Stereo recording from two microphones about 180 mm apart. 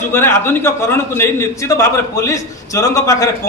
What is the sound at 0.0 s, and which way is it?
A man's voice, 15° left (ahead or behind).